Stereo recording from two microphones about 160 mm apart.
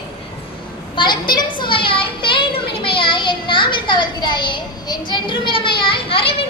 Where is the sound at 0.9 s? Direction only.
30° left (ahead or behind).